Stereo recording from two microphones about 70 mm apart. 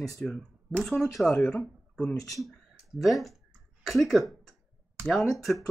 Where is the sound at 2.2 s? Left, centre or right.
Centre.